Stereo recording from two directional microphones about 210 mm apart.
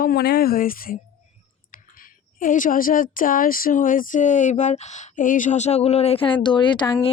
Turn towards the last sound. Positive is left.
turn(degrees=20)  # may be behind; listen again after turning